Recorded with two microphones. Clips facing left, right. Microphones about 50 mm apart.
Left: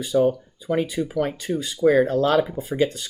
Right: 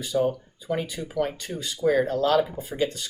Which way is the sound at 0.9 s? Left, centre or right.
Left.